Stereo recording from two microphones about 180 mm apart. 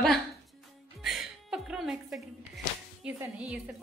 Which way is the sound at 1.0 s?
Centre (ahead or behind).